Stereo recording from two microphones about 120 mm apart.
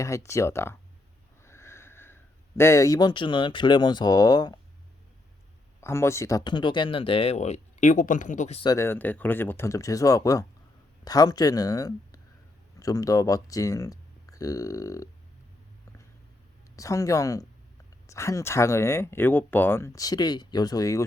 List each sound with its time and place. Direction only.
0.0 s speech: 25° left (ahead or behind)
5.8 s speech: 25° left (ahead or behind)
6.4 s speech: 40° left (ahead or behind); by 8.5 s 90° left
8.6 s speech: 25° left (ahead or behind)
16.7 s speech: 25° left (ahead or behind)